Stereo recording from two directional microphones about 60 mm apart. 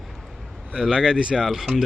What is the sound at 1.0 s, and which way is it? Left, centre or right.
Speech, centre.